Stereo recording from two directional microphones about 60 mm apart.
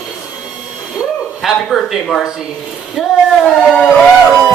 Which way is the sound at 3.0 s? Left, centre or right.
Centre.